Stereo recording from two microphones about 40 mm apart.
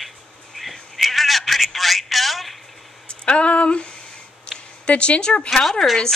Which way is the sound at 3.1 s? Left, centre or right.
Left.